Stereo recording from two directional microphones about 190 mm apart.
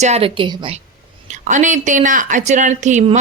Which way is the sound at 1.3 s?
40° right (ahead or behind).